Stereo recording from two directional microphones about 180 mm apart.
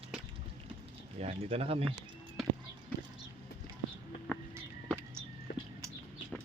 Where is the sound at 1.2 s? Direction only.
35° right (ahead or behind).